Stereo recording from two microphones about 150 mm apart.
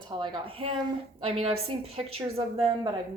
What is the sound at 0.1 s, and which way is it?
A woman's voice, 35° right (ahead or behind).